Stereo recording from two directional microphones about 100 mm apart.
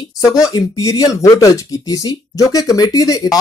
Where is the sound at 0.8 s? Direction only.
35° left (ahead or behind).